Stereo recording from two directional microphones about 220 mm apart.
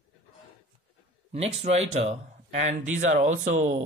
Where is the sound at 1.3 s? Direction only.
30° right (ahead or behind).